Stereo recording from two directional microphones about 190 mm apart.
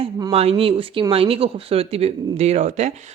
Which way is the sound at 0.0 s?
20° right (ahead or behind).